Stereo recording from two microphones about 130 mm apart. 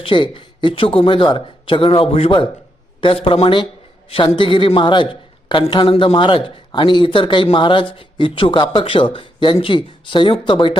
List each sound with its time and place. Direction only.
0.0 s a man's voice: 40° left (ahead or behind)